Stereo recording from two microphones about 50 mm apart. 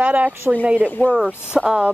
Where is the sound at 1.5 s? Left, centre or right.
Centre.